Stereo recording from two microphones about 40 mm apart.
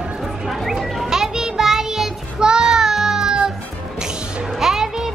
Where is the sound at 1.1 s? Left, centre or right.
Centre.